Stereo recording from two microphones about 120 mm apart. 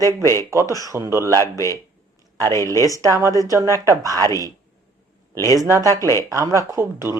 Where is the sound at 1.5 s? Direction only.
25° left (ahead or behind).